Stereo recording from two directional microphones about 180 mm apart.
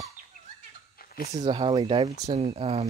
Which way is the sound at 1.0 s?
55° left (ahead or behind).